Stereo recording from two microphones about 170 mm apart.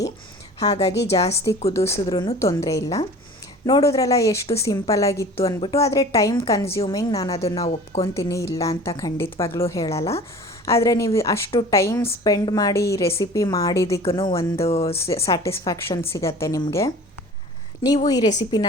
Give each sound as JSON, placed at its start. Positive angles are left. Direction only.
{"t": 0.6, "sound": "speech", "side_deg": 40}
{"t": 1.7, "sound": "a woman's voice", "side_deg": 15}
{"t": 14.7, "sound": "speech", "side_deg": 35}
{"t": 14.9, "sound": "a woman's voice", "side_deg": 15}